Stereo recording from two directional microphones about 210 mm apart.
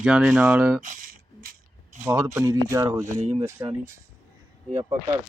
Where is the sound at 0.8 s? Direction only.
40° right (ahead or behind).